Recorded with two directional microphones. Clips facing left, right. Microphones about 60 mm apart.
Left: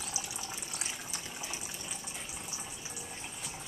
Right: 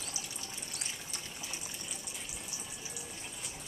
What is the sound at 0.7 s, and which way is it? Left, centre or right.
Water, centre.